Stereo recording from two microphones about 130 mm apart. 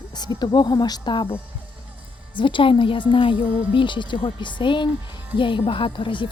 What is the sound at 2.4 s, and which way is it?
A woman's voice, 40° left (ahead or behind).